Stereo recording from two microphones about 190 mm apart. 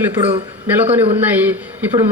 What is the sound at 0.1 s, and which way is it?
Speech, 30° right (ahead or behind).